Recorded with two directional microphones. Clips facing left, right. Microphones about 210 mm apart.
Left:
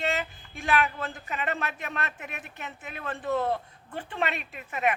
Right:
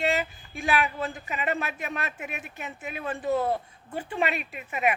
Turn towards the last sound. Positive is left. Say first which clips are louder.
# right 1 dB
turn(degrees=-10)  # may be behind; listen again after turning